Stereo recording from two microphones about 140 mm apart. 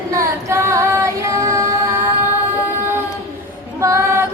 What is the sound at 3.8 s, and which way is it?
Female singing, 20° right (ahead or behind).